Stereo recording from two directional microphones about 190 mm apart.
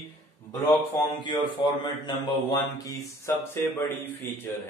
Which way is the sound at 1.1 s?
25° left (ahead or behind).